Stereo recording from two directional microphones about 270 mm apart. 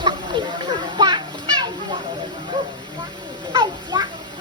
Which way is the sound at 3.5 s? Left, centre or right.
Centre.